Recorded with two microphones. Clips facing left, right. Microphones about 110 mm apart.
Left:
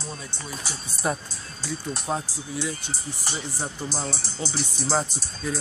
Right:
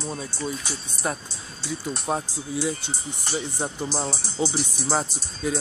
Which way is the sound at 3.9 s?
15° right (ahead or behind).